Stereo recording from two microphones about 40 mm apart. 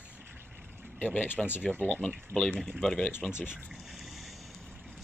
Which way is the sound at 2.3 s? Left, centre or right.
Left.